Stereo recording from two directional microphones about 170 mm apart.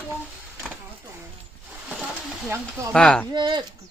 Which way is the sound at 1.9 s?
5° right (ahead or behind).